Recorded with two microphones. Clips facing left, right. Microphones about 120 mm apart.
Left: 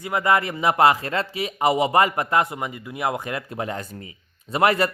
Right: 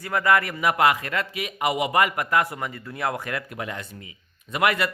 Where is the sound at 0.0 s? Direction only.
20° left (ahead or behind).